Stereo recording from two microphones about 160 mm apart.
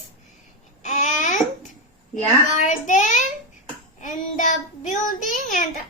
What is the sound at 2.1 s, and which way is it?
A child's voice, 50° left (ahead or behind).